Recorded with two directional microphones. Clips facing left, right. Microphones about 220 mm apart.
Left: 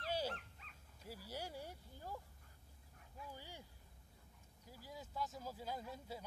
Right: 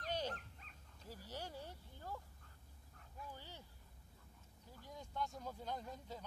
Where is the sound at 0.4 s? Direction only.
40° right (ahead or behind).